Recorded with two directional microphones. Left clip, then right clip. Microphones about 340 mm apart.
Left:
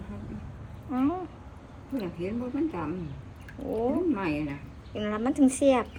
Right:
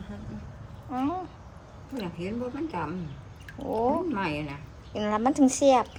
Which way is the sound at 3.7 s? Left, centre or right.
Centre.